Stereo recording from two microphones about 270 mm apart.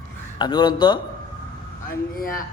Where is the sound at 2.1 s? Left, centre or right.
Left.